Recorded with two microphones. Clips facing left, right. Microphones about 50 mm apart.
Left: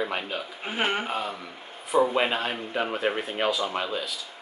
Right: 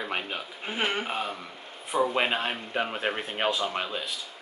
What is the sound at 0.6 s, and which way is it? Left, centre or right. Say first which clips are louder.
Speech: left 2 dB; centre.